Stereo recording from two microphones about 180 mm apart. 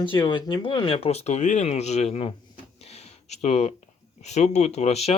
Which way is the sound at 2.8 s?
35° left (ahead or behind).